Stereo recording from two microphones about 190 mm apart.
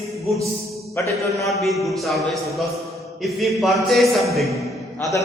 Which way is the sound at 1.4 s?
Centre (ahead or behind).